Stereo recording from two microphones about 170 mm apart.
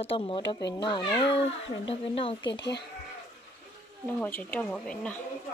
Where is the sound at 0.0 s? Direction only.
35° left (ahead or behind).